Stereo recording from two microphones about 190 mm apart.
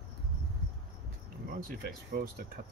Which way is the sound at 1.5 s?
50° right (ahead or behind).